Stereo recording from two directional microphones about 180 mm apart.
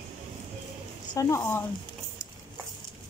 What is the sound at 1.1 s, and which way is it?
Speech, 15° left (ahead or behind).